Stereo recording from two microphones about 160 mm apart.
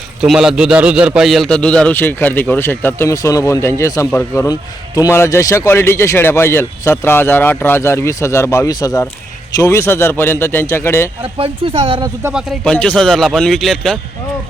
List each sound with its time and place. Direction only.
0.2 s a man's voice: 5° right (ahead or behind); by 11.1 s 15° left (ahead or behind)
11.2 s speech: 35° right (ahead or behind)
11.9 s speech: 20° right (ahead or behind)
12.3 s speech: 5° right (ahead or behind)